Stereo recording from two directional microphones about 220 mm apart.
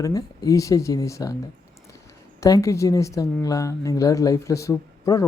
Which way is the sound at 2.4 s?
15° left (ahead or behind).